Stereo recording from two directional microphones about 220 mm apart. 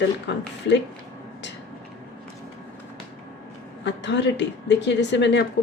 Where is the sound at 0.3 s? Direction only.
50° left (ahead or behind).